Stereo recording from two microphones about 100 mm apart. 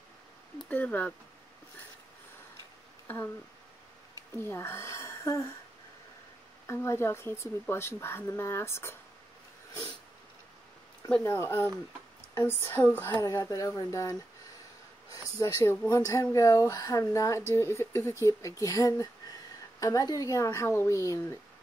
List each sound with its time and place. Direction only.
0.7 s speech: 15° left (ahead or behind)
3.1 s speech: 20° left (ahead or behind)
4.4 s speech: 25° left (ahead or behind)
6.7 s speech: 25° left (ahead or behind)
11.2 s speech: 25° left (ahead or behind)
13.4 s speech: 35° left (ahead or behind)